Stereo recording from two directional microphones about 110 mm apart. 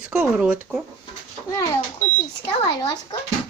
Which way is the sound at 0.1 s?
5° right (ahead or behind).